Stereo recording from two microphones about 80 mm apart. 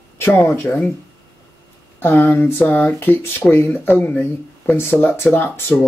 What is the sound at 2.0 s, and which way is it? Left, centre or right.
Speech, left.